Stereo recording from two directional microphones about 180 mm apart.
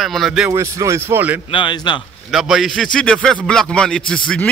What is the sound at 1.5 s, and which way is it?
Speech, 25° left (ahead or behind).